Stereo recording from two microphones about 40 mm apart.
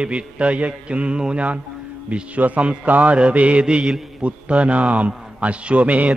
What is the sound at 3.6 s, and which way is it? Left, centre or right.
Mantra, centre.